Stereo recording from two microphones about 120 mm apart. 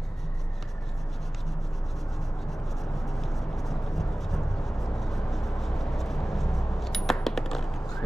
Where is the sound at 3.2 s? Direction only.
Centre (ahead or behind).